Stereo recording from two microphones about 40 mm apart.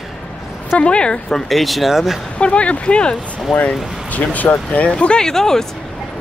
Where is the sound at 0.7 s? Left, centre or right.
Left.